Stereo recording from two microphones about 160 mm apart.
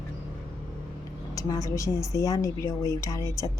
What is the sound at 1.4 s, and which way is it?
A woman's voice, 20° left (ahead or behind).